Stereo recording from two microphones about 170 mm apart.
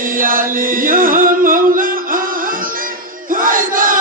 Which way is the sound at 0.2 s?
55° right (ahead or behind).